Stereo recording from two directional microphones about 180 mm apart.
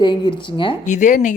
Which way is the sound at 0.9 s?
45° left (ahead or behind).